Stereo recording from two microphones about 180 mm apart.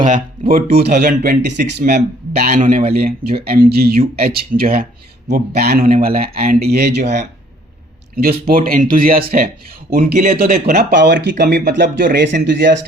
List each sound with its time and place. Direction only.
0.1 s speech: 55° right (ahead or behind)
8.1 s speech: 55° right (ahead or behind)
11.0 s speech: 70° right (ahead or behind)
12.1 s speech: 80° right